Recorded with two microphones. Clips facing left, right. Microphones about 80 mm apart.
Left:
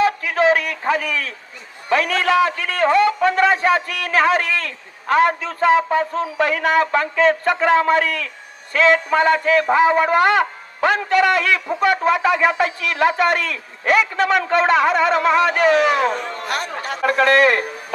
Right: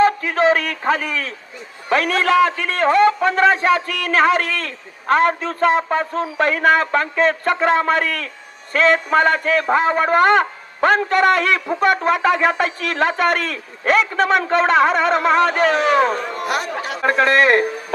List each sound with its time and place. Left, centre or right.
0.0 s a man's voice: right
17.1 s a man's voice: right